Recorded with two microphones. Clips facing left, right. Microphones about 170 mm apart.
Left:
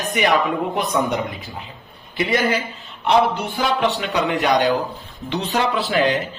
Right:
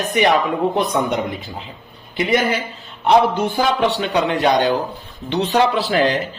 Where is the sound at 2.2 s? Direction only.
25° right (ahead or behind).